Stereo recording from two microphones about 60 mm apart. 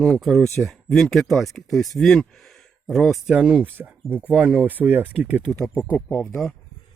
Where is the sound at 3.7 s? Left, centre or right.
Right.